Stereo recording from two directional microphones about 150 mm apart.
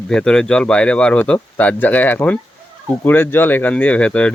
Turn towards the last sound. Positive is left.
turn(degrees=10)  # may be behind; listen again after turning